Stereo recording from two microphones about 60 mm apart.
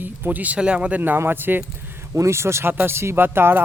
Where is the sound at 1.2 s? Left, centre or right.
Right.